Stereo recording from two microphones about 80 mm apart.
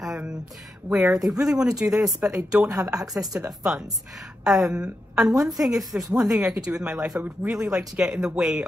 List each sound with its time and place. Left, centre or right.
0.0 s a sound: centre
0.8 s a woman's voice: centre
1.4 s a woman's voice: centre
2.7 s speech: right
3.3 s a woman's voice: centre